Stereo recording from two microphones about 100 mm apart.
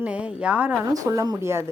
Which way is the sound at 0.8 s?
30° right (ahead or behind).